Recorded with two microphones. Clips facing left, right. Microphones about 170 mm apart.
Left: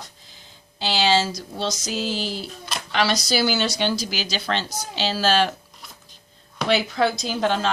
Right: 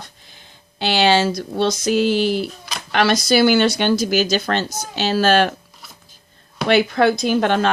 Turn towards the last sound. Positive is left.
turn(degrees=-60)  # may be behind; listen again after turning